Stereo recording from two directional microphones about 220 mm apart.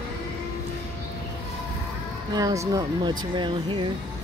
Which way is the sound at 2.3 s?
15° right (ahead or behind).